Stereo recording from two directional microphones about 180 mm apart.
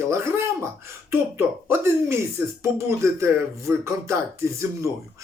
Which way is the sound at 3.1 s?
15° right (ahead or behind).